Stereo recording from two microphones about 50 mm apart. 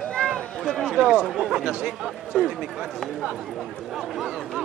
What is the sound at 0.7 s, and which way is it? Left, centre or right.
Speech, centre.